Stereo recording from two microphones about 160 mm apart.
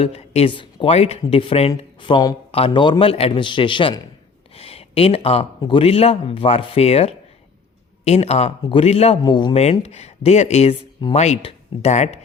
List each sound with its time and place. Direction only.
0.0 s speech: 40° left (ahead or behind)
4.5 s a sound: 40° left (ahead or behind)
5.5 s speech: 30° left (ahead or behind)
9.2 s speech: 30° left (ahead or behind)
9.8 s speech: 40° left (ahead or behind)